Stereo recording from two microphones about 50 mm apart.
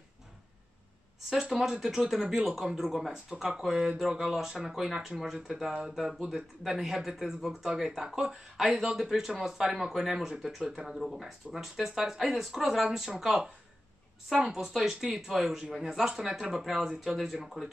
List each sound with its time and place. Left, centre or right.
1.3 s speech: centre
5.7 s speech: centre
14.3 s speech: centre